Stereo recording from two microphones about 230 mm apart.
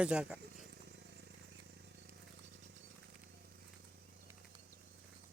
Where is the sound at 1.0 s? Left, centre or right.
Right.